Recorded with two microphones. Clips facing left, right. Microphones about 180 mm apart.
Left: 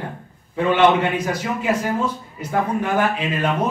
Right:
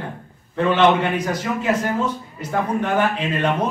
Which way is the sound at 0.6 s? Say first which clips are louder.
Even; 10° left (ahead or behind).